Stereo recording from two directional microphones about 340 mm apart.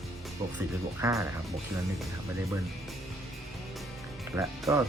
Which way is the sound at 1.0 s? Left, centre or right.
Centre.